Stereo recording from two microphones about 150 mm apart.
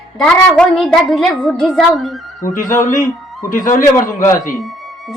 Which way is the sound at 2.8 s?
60° left (ahead or behind).